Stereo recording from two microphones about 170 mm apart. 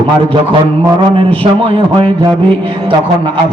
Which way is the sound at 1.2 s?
30° right (ahead or behind).